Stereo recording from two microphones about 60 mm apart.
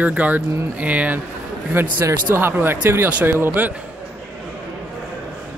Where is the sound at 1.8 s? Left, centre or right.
Right.